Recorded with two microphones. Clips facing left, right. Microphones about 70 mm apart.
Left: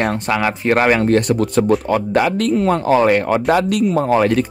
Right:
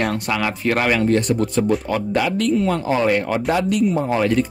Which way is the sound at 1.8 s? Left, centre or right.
Left.